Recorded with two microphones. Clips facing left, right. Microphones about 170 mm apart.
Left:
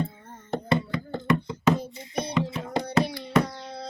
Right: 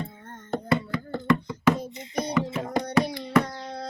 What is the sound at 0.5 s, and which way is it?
Chopping, 20° left (ahead or behind).